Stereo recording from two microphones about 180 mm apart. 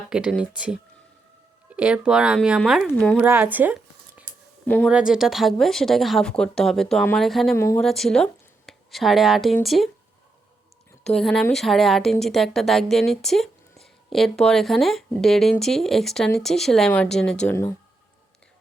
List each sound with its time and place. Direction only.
0.1 s a woman's voice: 5° right (ahead or behind)
3.2 s speech: 10° right (ahead or behind)
4.6 s a woman's voice: 10° left (ahead or behind)
4.9 s a woman's voice: 5° right (ahead or behind)
7.5 s speech: 15° left (ahead or behind)
7.8 s a woman's voice: centre (ahead or behind)
11.0 s a woman's voice: 5° left (ahead or behind)